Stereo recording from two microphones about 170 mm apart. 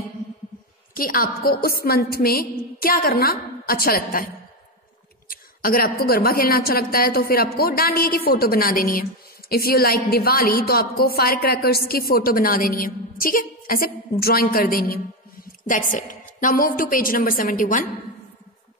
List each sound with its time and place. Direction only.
0.9 s a woman's voice: 55° left (ahead or behind)
5.3 s a woman's voice: 55° left (ahead or behind)